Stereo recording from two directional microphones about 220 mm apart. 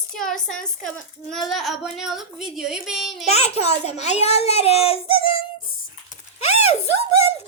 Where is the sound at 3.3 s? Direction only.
30° left (ahead or behind).